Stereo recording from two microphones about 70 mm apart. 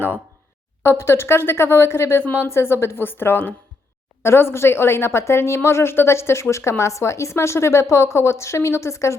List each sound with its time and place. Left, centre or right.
0.8 s a woman's voice: left